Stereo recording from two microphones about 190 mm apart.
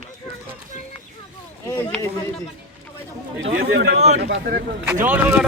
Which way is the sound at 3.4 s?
60° right (ahead or behind).